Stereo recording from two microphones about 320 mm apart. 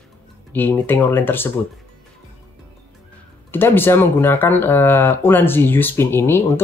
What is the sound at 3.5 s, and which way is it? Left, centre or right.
Speech, centre.